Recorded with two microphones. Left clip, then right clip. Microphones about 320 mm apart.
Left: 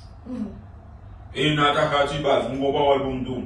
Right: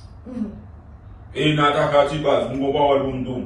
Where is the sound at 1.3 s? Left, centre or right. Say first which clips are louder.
Right 2 dB; centre.